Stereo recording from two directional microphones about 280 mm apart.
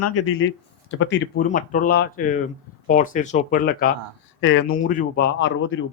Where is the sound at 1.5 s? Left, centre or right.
Left.